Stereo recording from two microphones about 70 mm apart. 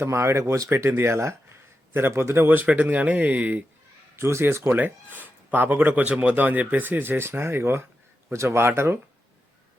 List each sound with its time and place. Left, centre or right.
0.0 s speech: right
4.2 s speech: right
4.7 s speech: right